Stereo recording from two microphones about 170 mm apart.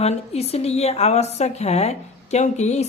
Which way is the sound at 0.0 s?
35° left (ahead or behind).